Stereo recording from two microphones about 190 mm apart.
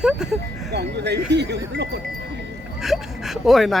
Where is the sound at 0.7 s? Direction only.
60° right (ahead or behind).